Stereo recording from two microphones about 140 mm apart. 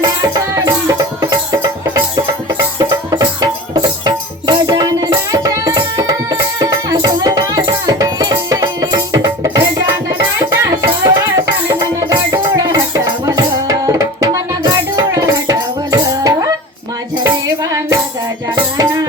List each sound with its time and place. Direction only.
0.0 s music: 25° right (ahead or behind)
2.7 s music: 30° right (ahead or behind)